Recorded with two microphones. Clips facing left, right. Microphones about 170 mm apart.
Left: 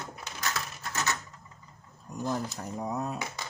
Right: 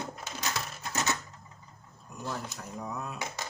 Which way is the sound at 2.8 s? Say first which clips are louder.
Left 6 dB; 40° left (ahead or behind).